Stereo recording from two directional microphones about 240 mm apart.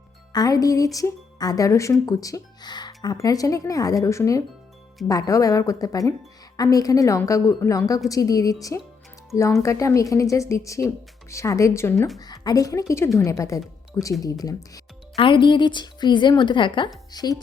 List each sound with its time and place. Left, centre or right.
0.3 s speech: centre